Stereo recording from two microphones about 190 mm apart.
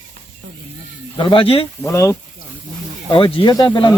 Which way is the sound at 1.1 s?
25° left (ahead or behind).